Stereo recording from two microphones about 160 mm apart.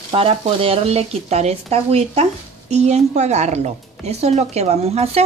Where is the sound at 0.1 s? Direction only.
35° right (ahead or behind).